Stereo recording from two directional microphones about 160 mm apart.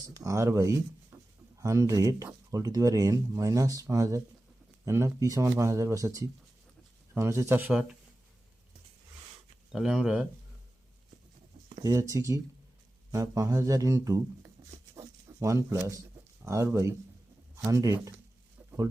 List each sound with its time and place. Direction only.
0.1 s speech: 20° right (ahead or behind)
9.7 s speech: 5° right (ahead or behind)
11.8 s speech: 20° right (ahead or behind)
14.9 s a sound: 20° right (ahead or behind)
16.4 s speech: 20° right (ahead or behind)